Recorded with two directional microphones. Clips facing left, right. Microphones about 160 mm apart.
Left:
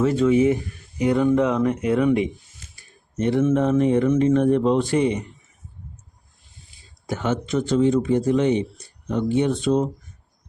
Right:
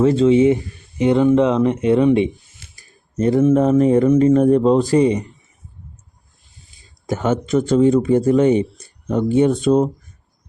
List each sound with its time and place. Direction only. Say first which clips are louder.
0.0 s speech: right 5 dB; 30° right (ahead or behind)
2.7 s speech: right 5 dB; 40° right (ahead or behind)
7.1 s speech: right 5 dB; 45° right (ahead or behind)